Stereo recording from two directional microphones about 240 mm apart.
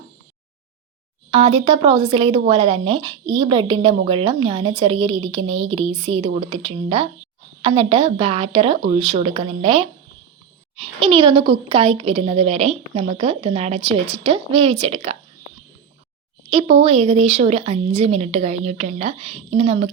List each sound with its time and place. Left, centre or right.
1.3 s a woman's voice: right
16.5 s a woman's voice: right